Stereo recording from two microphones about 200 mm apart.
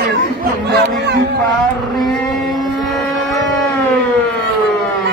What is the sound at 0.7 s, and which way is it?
Speech, 60° right (ahead or behind).